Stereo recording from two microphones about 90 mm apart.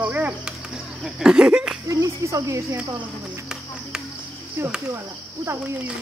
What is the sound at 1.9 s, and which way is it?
Speech, 35° right (ahead or behind).